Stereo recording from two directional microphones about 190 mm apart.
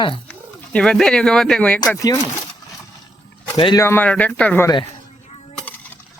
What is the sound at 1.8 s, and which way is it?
Speech, 15° left (ahead or behind).